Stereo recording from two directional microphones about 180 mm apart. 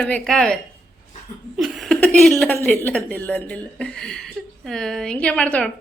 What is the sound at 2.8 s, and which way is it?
A woman's voice, 10° left (ahead or behind).